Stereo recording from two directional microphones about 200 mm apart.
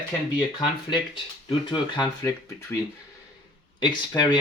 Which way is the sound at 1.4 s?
25° left (ahead or behind).